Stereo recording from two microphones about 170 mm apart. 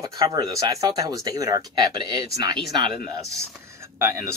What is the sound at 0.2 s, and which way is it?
Speech, 20° right (ahead or behind).